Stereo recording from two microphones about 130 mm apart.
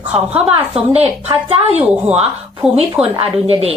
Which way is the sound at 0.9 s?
50° right (ahead or behind).